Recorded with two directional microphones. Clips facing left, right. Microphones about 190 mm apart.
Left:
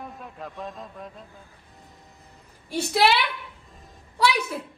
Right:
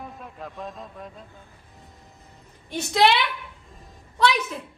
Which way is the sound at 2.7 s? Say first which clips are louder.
Right 1 dB; 5° left (ahead or behind).